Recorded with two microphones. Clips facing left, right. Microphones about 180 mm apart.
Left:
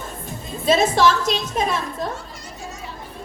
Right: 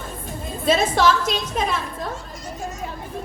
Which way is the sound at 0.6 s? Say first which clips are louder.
Left 2 dB; 50° right (ahead or behind).